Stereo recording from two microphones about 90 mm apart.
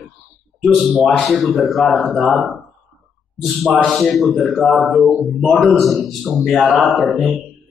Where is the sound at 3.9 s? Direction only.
Centre (ahead or behind).